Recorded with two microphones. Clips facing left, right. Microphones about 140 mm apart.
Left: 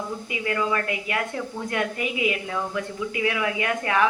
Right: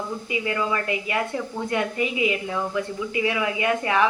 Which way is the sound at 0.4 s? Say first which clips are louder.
Left 2 dB; 5° right (ahead or behind).